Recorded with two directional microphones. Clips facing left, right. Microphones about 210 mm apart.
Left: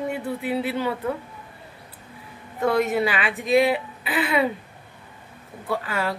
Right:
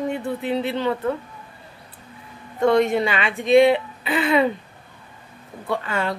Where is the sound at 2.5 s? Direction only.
5° left (ahead or behind).